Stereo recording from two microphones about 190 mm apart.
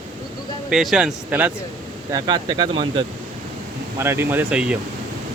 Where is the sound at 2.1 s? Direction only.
25° right (ahead or behind).